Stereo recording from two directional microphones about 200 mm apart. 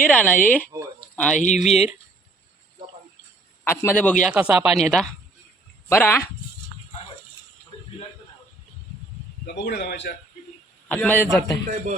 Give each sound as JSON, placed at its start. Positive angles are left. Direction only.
{"t": 0.0, "sound": "speech", "side_deg": 5}
{"t": 0.7, "sound": "a sound", "side_deg": -15}
{"t": 1.1, "sound": "speech", "side_deg": 5}
{"t": 1.4, "sound": "speech", "side_deg": 35}
{"t": 3.6, "sound": "speech", "side_deg": 10}
{"t": 4.3, "sound": "speech", "side_deg": -5}
{"t": 9.6, "sound": "a man's voice", "side_deg": 55}
{"t": 10.8, "sound": "speech", "side_deg": 10}